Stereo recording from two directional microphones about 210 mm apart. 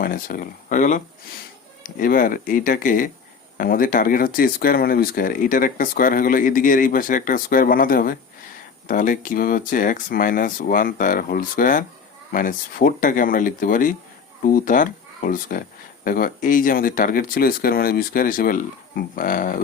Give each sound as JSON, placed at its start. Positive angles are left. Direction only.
{"t": 0.0, "sound": "speech", "side_deg": 40}